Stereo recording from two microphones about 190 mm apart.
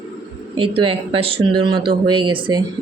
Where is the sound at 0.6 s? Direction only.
30° right (ahead or behind).